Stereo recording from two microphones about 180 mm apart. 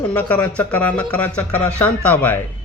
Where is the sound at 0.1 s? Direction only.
10° left (ahead or behind).